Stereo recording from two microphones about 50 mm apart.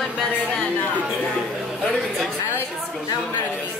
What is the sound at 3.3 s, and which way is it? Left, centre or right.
Chatter, left.